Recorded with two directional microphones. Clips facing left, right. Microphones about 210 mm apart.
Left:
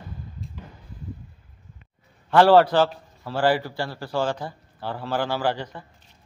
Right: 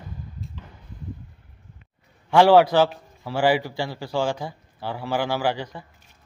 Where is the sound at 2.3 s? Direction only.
10° right (ahead or behind).